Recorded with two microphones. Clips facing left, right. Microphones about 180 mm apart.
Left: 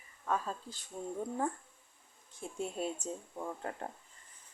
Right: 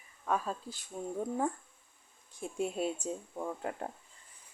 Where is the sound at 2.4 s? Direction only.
10° right (ahead or behind).